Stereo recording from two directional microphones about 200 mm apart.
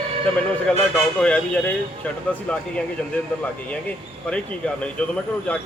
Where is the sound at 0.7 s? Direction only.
5° left (ahead or behind).